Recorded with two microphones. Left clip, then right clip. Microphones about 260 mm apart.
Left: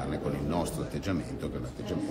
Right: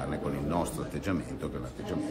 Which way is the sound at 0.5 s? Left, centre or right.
Centre.